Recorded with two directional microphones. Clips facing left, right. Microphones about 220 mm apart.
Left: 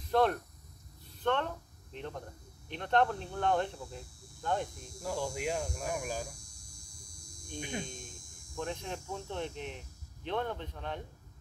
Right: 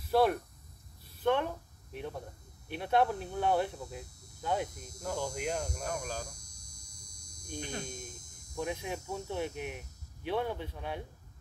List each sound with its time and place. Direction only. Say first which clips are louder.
0.1 s speech: right 1 dB; 10° right (ahead or behind)
5.0 s speech: even; 5° left (ahead or behind)
5.8 s hum: left 1 dB; 5° left (ahead or behind)
7.8 s speech: right 2 dB; 40° right (ahead or behind)
8.5 s speech: right 2 dB; 10° right (ahead or behind)